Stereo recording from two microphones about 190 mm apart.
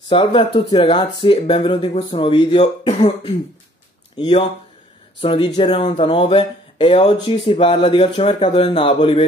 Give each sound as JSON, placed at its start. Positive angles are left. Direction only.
{"t": 0.1, "sound": "speech", "side_deg": 25}